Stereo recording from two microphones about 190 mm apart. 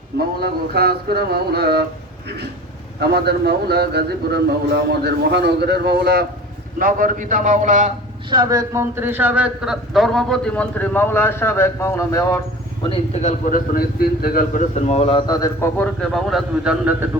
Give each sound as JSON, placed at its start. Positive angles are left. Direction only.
{"t": 0.4, "sound": "a man's voice", "side_deg": -55}
{"t": 3.0, "sound": "a man's voice", "side_deg": -60}
{"t": 6.7, "sound": "a man's voice", "side_deg": -45}
{"t": 8.3, "sound": "speech", "side_deg": -20}
{"t": 12.8, "sound": "a man's voice", "side_deg": 30}
{"t": 13.4, "sound": "a man's voice", "side_deg": 50}
{"t": 15.3, "sound": "speech", "side_deg": 20}